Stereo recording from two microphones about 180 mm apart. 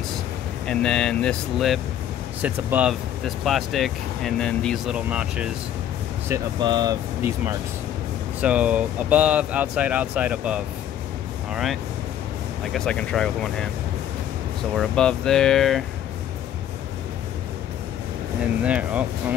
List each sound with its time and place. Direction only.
0.7 s speech: 5° left (ahead or behind)
6.6 s speech: 25° right (ahead or behind); by 13.7 s 5° left (ahead or behind)
14.8 s speech: 5° left (ahead or behind)
18.6 s speech: 5° right (ahead or behind)